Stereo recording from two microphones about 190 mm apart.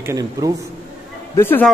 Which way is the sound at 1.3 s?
10° left (ahead or behind).